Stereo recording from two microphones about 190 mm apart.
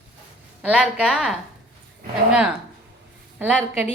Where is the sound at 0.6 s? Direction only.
5° right (ahead or behind).